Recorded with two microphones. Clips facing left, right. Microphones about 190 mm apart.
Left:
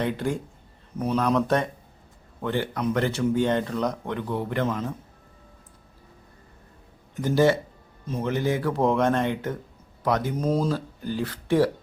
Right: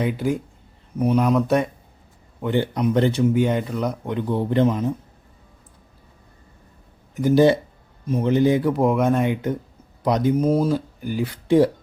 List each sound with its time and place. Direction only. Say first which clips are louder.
0.0 s speech: right 4 dB; 10° right (ahead or behind)
7.2 s speech: right 5 dB; 15° right (ahead or behind)